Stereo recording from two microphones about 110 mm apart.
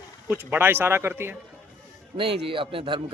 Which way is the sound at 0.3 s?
20° right (ahead or behind).